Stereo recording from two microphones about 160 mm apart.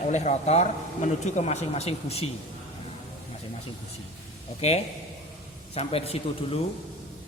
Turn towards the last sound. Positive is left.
turn(degrees=35)  # may be behind; listen again after turning